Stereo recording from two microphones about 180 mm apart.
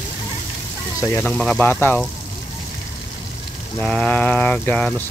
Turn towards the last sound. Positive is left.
turn(degrees=5)  # may be behind; listen again after turning